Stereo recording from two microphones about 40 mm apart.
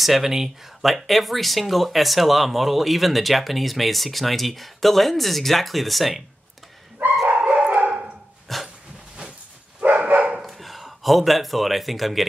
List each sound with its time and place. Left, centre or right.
0.0 s speech: centre
7.4 s dog: right
8.5 s dog: centre
9.8 s dog: right
10.4 s speech: centre